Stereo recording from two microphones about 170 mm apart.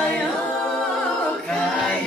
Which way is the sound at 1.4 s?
Centre (ahead or behind).